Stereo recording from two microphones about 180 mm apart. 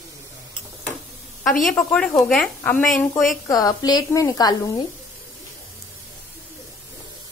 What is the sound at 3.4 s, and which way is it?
A woman's voice, 20° left (ahead or behind).